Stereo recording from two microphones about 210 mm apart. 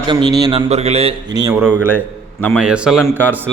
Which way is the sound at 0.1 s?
20° right (ahead or behind).